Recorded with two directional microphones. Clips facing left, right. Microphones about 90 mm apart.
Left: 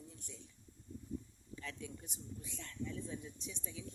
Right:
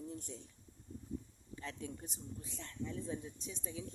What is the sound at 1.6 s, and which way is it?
Speech, 35° right (ahead or behind).